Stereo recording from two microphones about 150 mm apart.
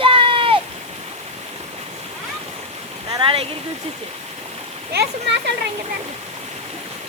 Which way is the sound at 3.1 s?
35° right (ahead or behind).